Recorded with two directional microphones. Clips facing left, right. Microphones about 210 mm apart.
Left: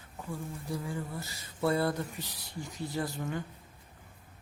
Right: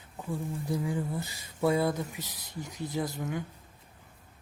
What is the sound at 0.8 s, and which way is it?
Speech, 15° right (ahead or behind).